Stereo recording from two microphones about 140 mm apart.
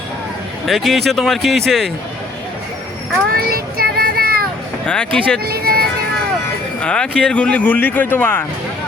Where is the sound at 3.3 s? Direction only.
90° right.